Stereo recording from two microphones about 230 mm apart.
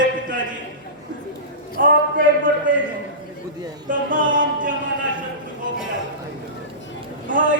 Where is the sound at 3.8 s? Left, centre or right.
Right.